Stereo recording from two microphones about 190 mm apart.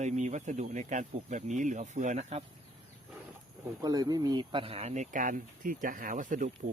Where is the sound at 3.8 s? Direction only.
20° right (ahead or behind).